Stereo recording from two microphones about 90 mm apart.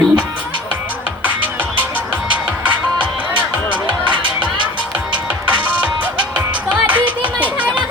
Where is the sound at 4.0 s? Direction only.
65° right (ahead or behind).